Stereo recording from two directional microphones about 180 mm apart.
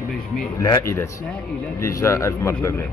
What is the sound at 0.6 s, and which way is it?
Speech, 15° left (ahead or behind).